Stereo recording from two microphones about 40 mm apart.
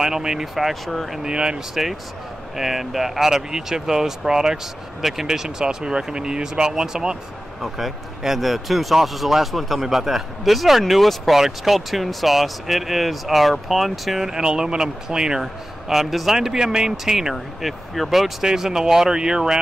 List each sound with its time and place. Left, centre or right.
0.0 s a man's voice: centre
0.6 s speech: centre
1.2 s speech: right
2.5 s a man's voice: centre
7.6 s speech: centre
14.3 s a man's voice: centre
18.4 s a man's voice: centre